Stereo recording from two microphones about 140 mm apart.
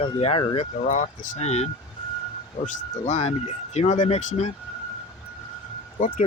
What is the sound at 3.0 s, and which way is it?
Speech, 50° left (ahead or behind).